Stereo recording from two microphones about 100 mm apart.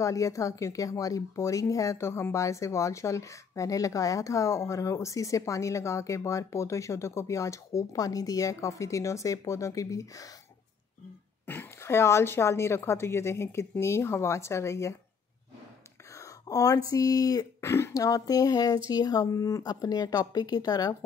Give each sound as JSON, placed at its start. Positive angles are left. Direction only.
{"t": 0.0, "sound": "speech", "side_deg": 35}
{"t": 11.4, "sound": "a woman's voice", "side_deg": 20}
{"t": 16.2, "sound": "speech", "side_deg": 35}